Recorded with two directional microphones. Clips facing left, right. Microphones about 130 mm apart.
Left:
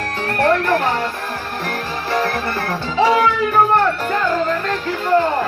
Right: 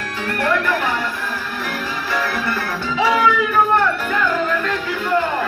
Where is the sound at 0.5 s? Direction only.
40° left (ahead or behind).